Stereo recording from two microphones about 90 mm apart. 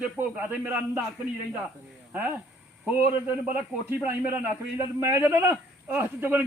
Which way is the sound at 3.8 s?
25° right (ahead or behind).